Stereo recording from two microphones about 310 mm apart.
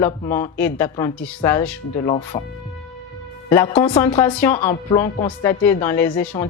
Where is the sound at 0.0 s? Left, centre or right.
Centre.